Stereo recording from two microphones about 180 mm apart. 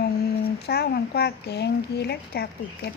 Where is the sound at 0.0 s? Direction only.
60° left (ahead or behind).